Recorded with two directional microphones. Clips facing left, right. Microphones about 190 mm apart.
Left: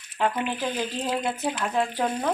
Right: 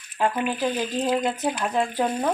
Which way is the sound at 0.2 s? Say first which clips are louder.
Right 2 dB; 10° right (ahead or behind).